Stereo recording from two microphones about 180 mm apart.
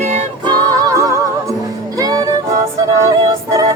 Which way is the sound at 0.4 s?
20° right (ahead or behind).